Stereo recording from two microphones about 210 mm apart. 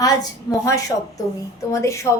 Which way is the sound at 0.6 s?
15° left (ahead or behind).